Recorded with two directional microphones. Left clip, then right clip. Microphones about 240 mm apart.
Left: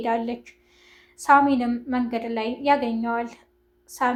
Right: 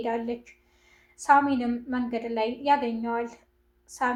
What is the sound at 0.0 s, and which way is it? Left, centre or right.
A woman's voice, left.